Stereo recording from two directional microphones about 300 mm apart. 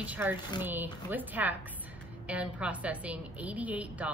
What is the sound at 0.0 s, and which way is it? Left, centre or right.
A woman's voice, centre.